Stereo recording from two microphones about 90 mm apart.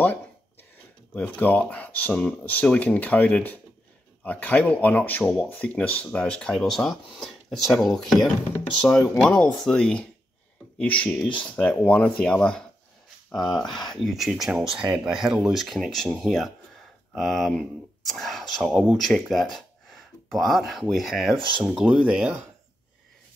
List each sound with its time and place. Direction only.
0.0 s a sound: 20° left (ahead or behind)
1.1 s speech: 15° left (ahead or behind); by 21.4 s centre (ahead or behind)
21.4 s speech: 65° right (ahead or behind)
21.6 s speech: 5° right (ahead or behind)